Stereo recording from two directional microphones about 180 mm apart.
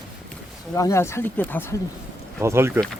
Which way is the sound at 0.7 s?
15° left (ahead or behind).